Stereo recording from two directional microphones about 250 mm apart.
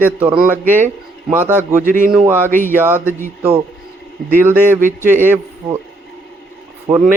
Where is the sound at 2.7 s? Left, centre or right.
Centre.